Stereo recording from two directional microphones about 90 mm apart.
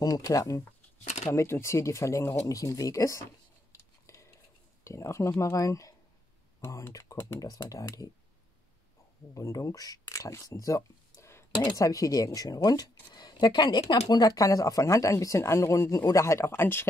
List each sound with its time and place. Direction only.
0.0 s speech: 45° left (ahead or behind)
3.7 s cutlery: 35° left (ahead or behind)
4.8 s speech: 35° left (ahead or behind)
9.3 s speech: 35° left (ahead or behind)
11.5 s speech: 55° left (ahead or behind)
11.8 s speech: 40° left (ahead or behind)